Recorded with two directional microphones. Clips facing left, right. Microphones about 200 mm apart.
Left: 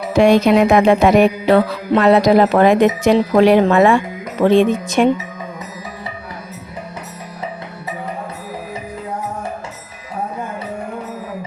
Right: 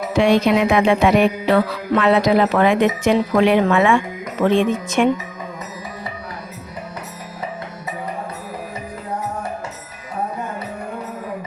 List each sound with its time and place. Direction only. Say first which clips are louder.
0.2 s music: left 4 dB; 45° left (ahead or behind)
2.0 s speech: left 4 dB; 40° left (ahead or behind)